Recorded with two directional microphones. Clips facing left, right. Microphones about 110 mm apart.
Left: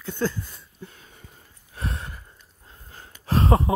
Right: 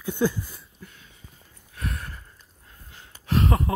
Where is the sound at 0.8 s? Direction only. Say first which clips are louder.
Left 4 dB; 35° left (ahead or behind).